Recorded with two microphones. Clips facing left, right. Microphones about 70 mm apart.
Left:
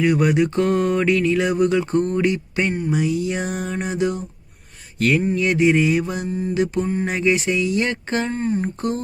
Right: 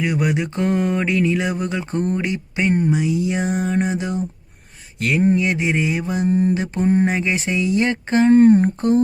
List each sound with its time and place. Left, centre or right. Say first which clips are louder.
0.0 s mantra: left 4 dB; centre
4.9 s speech: left 2 dB; centre
5.3 s mantra: left 2 dB; right
6.2 s mantra: right 7 dB; right
6.5 s mantra: right 2 dB; right
8.3 s speech: right 12 dB; right